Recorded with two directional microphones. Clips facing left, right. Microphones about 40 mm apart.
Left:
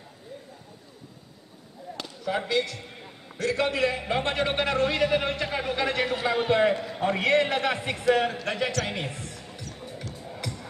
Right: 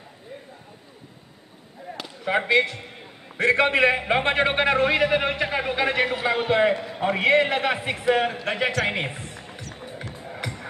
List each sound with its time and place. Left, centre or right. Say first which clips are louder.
1.9 s chop: right 2 dB; right
2.2 s a man's voice: right 6 dB; right